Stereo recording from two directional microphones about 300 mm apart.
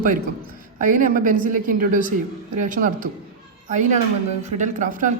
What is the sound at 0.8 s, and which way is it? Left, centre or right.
A woman's voice, right.